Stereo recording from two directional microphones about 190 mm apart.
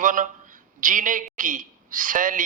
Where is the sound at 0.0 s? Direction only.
45° right (ahead or behind).